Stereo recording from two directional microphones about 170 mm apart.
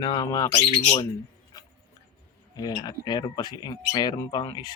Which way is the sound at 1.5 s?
20° left (ahead or behind).